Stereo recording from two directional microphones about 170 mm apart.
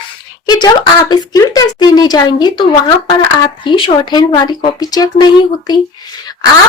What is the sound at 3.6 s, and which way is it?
Speech, 30° left (ahead or behind).